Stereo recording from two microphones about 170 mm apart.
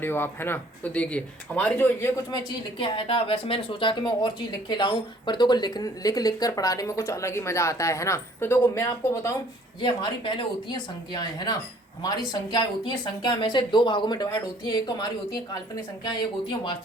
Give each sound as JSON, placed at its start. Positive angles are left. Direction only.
{"t": 0.0, "sound": "speech", "side_deg": 15}
{"t": 2.3, "sound": "speech", "side_deg": 30}
{"t": 9.8, "sound": "speech", "side_deg": 30}